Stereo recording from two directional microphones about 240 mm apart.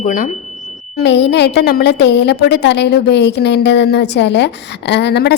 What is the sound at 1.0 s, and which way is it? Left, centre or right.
A woman's voice, left.